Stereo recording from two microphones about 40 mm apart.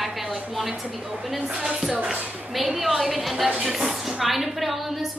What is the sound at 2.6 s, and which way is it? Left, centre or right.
A woman's voice, centre.